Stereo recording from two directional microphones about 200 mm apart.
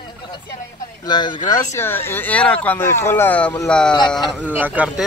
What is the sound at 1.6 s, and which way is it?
Speech, 10° left (ahead or behind).